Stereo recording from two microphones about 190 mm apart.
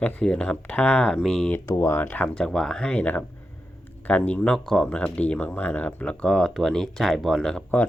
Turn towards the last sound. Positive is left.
turn(degrees=5)  # may be behind; listen again after turning